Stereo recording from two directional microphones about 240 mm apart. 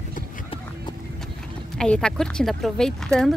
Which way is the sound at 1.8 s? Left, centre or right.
Centre.